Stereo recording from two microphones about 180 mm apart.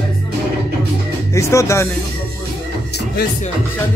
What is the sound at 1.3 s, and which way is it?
Music, 15° left (ahead or behind).